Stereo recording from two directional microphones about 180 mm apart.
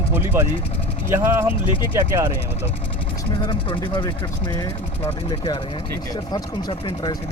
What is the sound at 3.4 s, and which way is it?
Speech, 25° left (ahead or behind).